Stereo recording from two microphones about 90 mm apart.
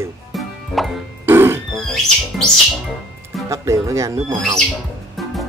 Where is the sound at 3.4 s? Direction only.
35° right (ahead or behind).